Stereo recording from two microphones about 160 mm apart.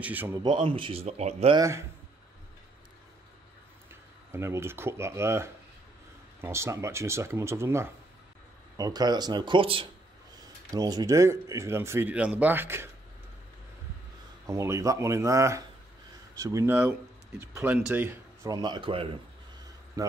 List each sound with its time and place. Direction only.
0.0 s speech: 10° right (ahead or behind)
0.4 s speech: 30° right (ahead or behind)
1.6 s speech: 15° right (ahead or behind)
3.9 s speech: 15° right (ahead or behind); by 9.8 s 35° right (ahead or behind)
10.3 s speech: 25° right (ahead or behind)
14.4 s speech: 20° right (ahead or behind); by 19.1 s 35° right (ahead or behind)
20.0 s a man's voice: 20° right (ahead or behind)